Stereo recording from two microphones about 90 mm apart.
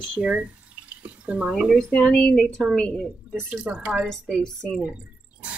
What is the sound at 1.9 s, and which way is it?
A woman's voice, 10° left (ahead or behind).